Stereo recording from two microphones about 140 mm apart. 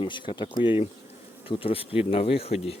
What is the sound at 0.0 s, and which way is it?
Speech, 35° left (ahead or behind).